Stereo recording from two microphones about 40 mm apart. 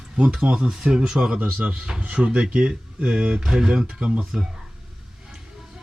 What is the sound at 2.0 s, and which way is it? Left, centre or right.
Speech, right.